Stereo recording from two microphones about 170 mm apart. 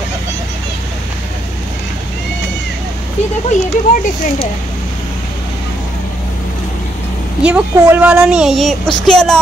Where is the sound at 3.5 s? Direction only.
45° left (ahead or behind).